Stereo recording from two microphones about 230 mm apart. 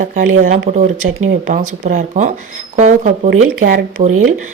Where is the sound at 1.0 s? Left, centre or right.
Right.